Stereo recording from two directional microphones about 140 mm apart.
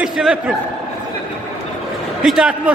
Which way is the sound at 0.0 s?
5° right (ahead or behind).